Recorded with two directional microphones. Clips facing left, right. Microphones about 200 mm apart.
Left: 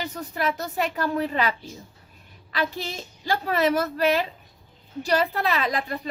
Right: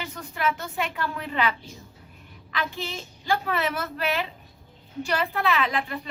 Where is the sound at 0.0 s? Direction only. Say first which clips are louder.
Left 1 dB; 40° left (ahead or behind).